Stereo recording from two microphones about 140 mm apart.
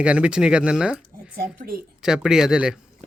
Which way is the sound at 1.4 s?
90° right.